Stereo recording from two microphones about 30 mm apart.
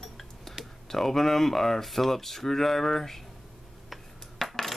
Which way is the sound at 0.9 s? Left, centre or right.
Centre.